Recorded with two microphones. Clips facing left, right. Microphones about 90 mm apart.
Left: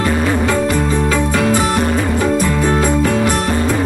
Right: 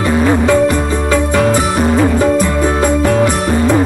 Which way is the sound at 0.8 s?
25° right (ahead or behind).